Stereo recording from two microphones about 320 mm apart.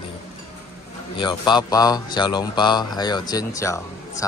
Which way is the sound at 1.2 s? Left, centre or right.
Centre.